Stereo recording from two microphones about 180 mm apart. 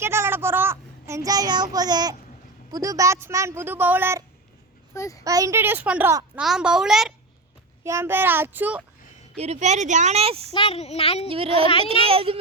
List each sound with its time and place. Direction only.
0.0 s a sound: 15° right (ahead or behind)
2.7 s speech: 20° right (ahead or behind)
4.9 s a child's voice: 15° left (ahead or behind)
5.2 s a child's voice: 20° right (ahead or behind); by 7.1 s 5° right (ahead or behind)
7.9 s speech: 15° right (ahead or behind)
9.4 s speech: 40° right (ahead or behind)
10.5 s speech: 30° left (ahead or behind)
11.3 s speech: 30° right (ahead or behind)